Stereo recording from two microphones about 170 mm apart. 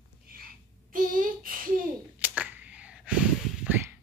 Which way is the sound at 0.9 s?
55° right (ahead or behind).